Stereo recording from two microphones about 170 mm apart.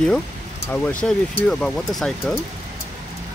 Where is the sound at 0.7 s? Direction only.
10° left (ahead or behind).